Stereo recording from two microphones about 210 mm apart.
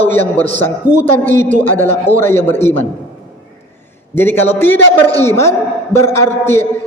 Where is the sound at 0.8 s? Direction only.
10° right (ahead or behind).